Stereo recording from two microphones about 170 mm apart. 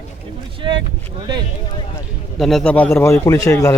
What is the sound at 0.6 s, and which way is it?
Vehicle, 25° right (ahead or behind).